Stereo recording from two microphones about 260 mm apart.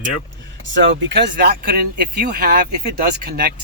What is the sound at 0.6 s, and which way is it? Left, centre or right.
Speech, right.